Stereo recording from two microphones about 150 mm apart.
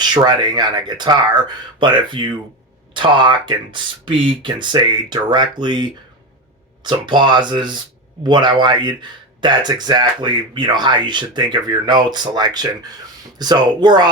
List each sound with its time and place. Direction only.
0.0 s speech: 30° right (ahead or behind)